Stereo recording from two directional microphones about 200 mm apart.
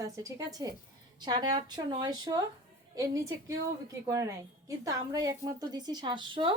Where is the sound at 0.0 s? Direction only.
15° right (ahead or behind).